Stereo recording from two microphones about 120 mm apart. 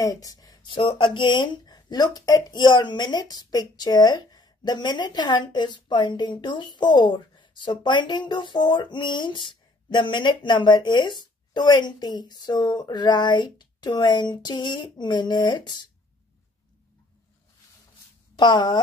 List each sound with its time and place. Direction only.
0.0 s speech: 30° left (ahead or behind)
18.3 s speech: 40° left (ahead or behind)